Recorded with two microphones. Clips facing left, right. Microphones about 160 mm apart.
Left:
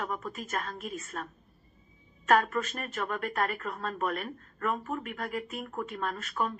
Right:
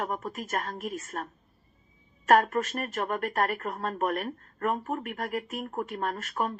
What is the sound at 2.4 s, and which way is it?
Speech, 45° right (ahead or behind).